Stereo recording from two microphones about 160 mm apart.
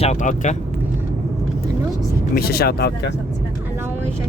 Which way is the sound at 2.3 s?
75° left (ahead or behind).